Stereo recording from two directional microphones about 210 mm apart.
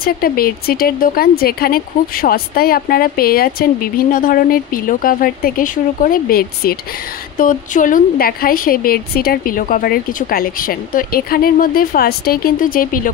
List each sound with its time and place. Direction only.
0.0 s speech: 45° left (ahead or behind)